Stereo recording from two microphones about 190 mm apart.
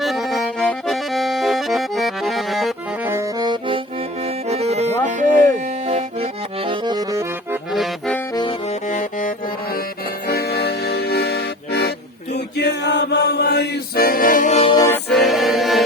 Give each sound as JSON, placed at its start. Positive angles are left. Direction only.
{"t": 0.0, "sound": "accordion", "side_deg": 0}
{"t": 3.1, "sound": "accordion", "side_deg": -15}
{"t": 4.2, "sound": "music", "side_deg": -35}
{"t": 7.7, "sound": "accordion", "side_deg": 0}
{"t": 8.9, "sound": "music", "side_deg": 40}
{"t": 10.2, "sound": "music", "side_deg": 55}
{"t": 14.8, "sound": "music", "side_deg": 10}
{"t": 15.1, "sound": "music", "side_deg": 0}